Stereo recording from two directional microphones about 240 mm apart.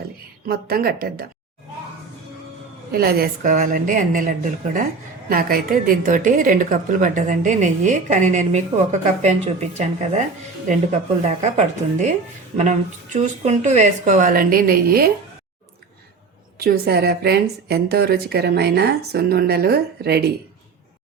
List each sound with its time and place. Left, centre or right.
0.4 s a woman's voice: right
2.9 s a woman's voice: right
11.3 s a woman's voice: right
16.6 s a woman's voice: right